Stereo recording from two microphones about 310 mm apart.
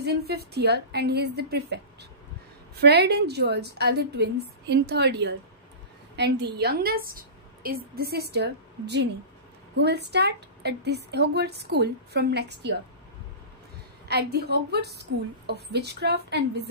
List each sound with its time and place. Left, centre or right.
0.0 s a woman's voice: right
14.0 s a woman's voice: right